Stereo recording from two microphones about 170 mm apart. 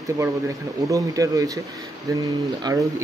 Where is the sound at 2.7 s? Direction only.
25° right (ahead or behind).